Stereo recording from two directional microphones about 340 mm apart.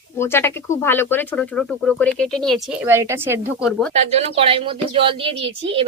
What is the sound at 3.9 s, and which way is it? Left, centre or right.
A woman's voice, centre.